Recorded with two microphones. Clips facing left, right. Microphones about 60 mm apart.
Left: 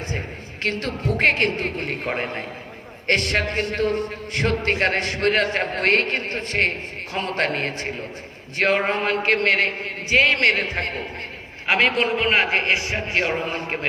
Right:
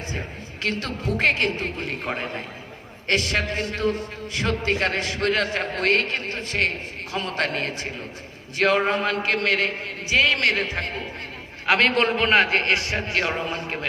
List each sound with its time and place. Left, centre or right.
0.6 s a man's voice: left
3.1 s a man's voice: left
11.6 s a man's voice: centre
11.9 s a man's voice: centre
12.3 s a man's voice: centre